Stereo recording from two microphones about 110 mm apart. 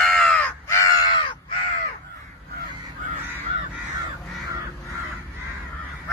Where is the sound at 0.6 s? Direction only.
25° left (ahead or behind).